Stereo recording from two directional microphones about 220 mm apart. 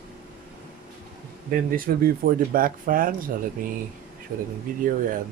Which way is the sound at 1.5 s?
40° right (ahead or behind).